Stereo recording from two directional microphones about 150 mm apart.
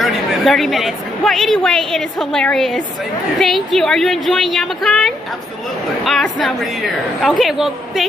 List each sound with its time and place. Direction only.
0.0 s a woman's voice: centre (ahead or behind)